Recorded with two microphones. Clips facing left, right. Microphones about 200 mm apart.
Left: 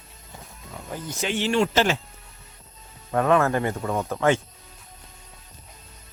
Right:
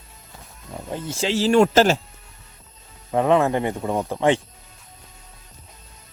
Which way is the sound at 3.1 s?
20° right (ahead or behind).